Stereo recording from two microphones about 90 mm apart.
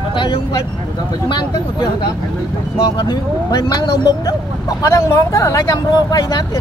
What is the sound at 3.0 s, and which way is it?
Speech, 55° left (ahead or behind).